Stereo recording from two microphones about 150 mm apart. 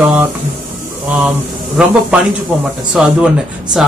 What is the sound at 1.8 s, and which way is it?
Speech, 10° right (ahead or behind).